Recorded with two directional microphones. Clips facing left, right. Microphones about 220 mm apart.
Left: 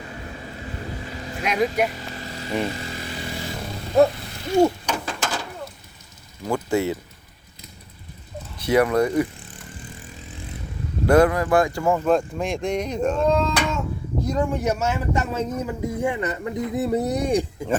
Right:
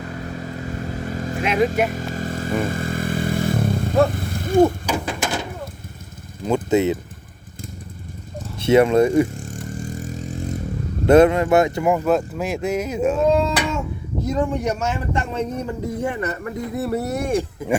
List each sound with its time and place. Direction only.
1.0 s vehicle: 50° right (ahead or behind)
1.9 s motorcycle: 45° right (ahead or behind)
4.1 s a sound: 50° right (ahead or behind)
4.9 s bird: 10° right (ahead or behind)
6.4 s speech: 20° right (ahead or behind)
8.5 s speech: 25° right (ahead or behind)
9.4 s vehicle: 45° right (ahead or behind)
11.0 s a man's voice: 25° right (ahead or behind); by 17.4 s 15° left (ahead or behind)